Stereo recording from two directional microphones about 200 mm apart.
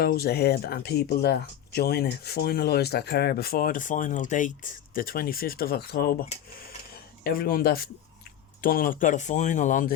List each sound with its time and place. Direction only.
0.0 s speech: 50° left (ahead or behind)